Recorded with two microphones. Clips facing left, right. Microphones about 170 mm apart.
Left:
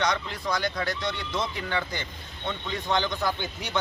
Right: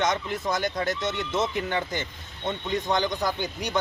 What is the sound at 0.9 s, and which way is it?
Speech, 20° right (ahead or behind).